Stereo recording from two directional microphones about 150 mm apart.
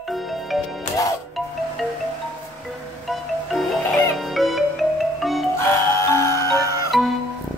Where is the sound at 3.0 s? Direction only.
Centre (ahead or behind).